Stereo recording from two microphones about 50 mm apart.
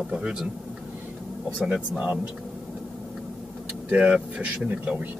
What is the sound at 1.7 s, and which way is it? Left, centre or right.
Speech, right.